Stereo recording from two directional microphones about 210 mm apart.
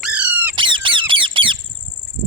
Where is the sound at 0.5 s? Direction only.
25° right (ahead or behind).